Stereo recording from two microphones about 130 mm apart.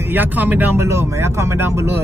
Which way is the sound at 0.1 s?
15° right (ahead or behind).